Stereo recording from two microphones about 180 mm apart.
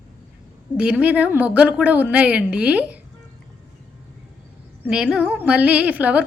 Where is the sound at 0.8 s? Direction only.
5° right (ahead or behind).